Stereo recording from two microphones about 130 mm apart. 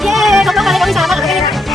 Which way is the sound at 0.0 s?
Centre (ahead or behind).